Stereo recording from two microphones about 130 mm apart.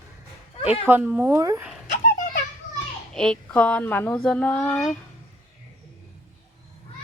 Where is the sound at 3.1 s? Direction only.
5° left (ahead or behind).